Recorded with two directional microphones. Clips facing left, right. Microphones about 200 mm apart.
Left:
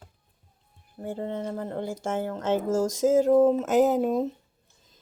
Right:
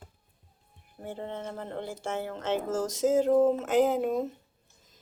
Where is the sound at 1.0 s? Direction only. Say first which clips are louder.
Left 5 dB; 45° left (ahead or behind).